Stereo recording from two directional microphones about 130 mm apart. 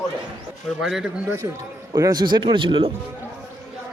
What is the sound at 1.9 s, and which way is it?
Speech, 30° right (ahead or behind).